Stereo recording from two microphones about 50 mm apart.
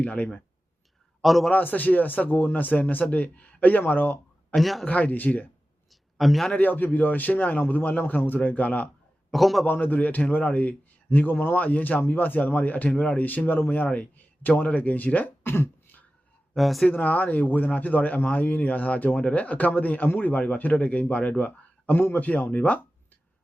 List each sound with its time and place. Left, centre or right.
0.0 s speech: left
1.2 s a man's voice: centre
1.5 s a man's voice: left
4.5 s speech: centre
4.9 s a man's voice: left
5.9 s a sound: centre
6.5 s a man's voice: left
9.3 s speech: centre
9.6 s a man's voice: left
15.4 s beatboxing: left
16.6 s speech: centre
17.0 s a man's voice: left